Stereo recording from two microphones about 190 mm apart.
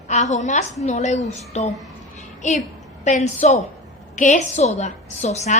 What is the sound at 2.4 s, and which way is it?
A woman's voice, 40° left (ahead or behind).